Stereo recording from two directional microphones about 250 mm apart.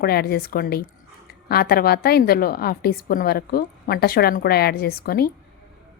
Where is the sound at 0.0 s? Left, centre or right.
Left.